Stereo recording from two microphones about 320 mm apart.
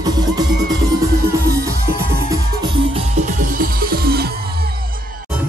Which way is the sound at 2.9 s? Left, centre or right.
Right.